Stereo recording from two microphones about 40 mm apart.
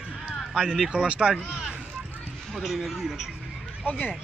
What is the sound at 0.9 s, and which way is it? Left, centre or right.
Speech, right.